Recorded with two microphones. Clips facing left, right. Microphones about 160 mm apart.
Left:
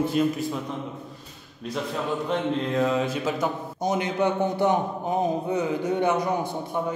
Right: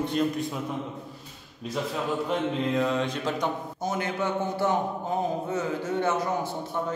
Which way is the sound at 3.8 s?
15° left (ahead or behind).